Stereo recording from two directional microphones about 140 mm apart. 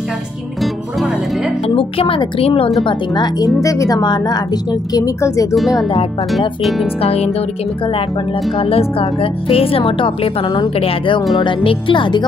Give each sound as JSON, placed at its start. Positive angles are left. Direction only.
{"t": 1.8, "sound": "speech", "side_deg": 40}
{"t": 5.5, "sound": "speech", "side_deg": 0}
{"t": 7.0, "sound": "speech", "side_deg": 45}
{"t": 8.5, "sound": "speech", "side_deg": 40}